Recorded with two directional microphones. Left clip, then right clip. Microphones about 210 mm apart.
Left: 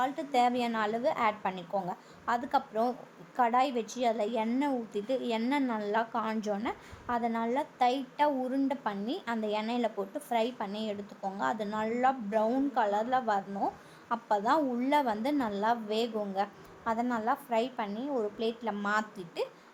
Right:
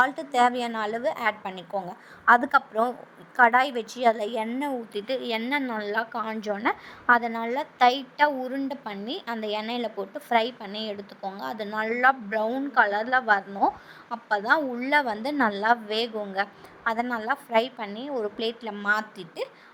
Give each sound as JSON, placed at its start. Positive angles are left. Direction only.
{"t": 0.0, "sound": "a woman's voice", "side_deg": -20}